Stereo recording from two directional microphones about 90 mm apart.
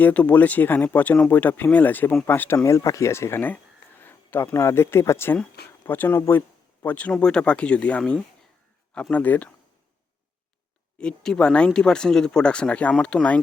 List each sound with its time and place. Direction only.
0.0 s speech: 15° left (ahead or behind)
2.6 s speech: 35° left (ahead or behind); by 9.5 s 20° left (ahead or behind)
10.9 s speech: 10° left (ahead or behind)